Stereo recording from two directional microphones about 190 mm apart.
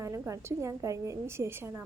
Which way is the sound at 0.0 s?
15° right (ahead or behind).